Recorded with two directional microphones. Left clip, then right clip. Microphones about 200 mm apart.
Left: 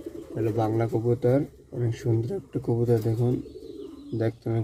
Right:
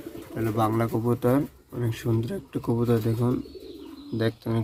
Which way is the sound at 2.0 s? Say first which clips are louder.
Even; 35° right (ahead or behind).